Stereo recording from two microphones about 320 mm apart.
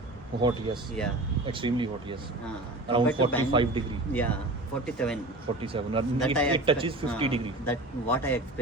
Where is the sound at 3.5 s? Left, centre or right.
Centre.